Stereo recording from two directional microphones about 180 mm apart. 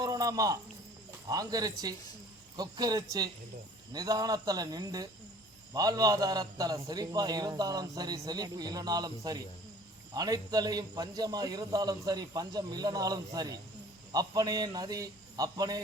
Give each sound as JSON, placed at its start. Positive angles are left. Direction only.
{"t": 0.0, "sound": "cricket", "side_deg": -20}
{"t": 1.3, "sound": "a man's voice", "side_deg": -20}